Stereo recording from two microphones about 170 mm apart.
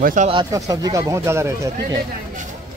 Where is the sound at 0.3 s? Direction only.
25° right (ahead or behind).